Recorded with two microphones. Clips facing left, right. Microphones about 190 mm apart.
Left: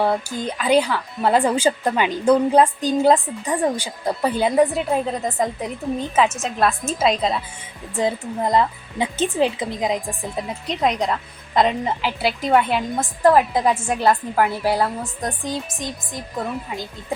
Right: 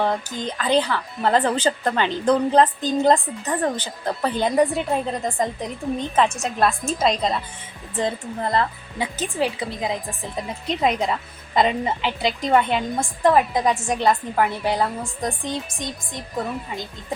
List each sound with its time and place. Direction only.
0.0 s a woman's voice: 10° left (ahead or behind)
7.9 s a woman's voice: 10° left (ahead or behind)
10.3 s a woman's voice: centre (ahead or behind)